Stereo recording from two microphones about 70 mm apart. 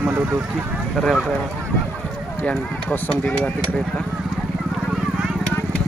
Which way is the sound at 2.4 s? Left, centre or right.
Left.